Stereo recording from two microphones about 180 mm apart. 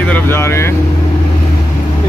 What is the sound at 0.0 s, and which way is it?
Vehicle, 10° left (ahead or behind).